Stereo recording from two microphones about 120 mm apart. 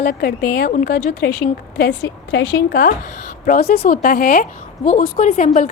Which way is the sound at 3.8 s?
90° left.